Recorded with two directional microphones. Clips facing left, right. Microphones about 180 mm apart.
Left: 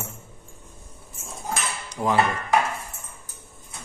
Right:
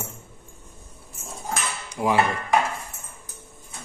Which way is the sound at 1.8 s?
10° right (ahead or behind).